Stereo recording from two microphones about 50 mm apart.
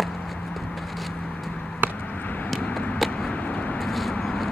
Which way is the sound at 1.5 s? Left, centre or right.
Centre.